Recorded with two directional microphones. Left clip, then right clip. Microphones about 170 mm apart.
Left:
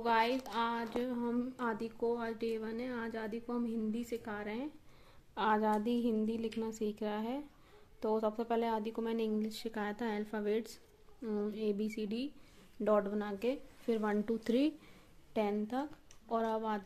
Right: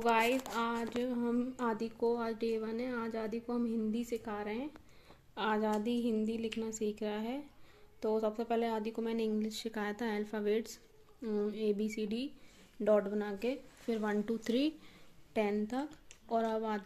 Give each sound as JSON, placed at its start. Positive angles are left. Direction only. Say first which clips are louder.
{"t": 0.0, "sound": "speech", "louder": "right 1 dB", "side_deg": -15}
{"t": 5.3, "sound": "a woman's voice", "louder": "left 2 dB", "side_deg": 5}
{"t": 15.3, "sound": "speech", "louder": "right 1 dB", "side_deg": -5}